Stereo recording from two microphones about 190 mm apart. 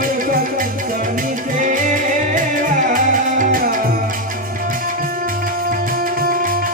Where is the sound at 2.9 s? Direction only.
45° right (ahead or behind).